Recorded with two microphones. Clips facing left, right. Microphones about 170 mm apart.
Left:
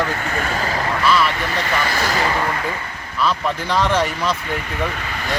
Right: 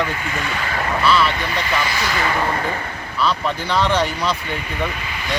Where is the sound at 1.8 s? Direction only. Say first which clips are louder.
Left 2 dB; 45° left (ahead or behind).